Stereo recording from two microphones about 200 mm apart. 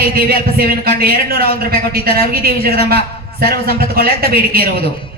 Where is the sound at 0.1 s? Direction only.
50° right (ahead or behind).